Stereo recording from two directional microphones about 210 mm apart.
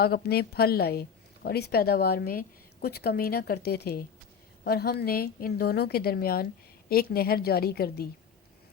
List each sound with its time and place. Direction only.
0.0 s a woman's voice: 50° left (ahead or behind)